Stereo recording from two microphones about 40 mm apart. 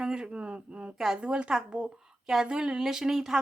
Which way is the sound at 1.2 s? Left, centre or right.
Right.